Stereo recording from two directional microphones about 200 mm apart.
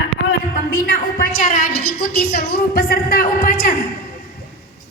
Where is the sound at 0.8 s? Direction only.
40° left (ahead or behind).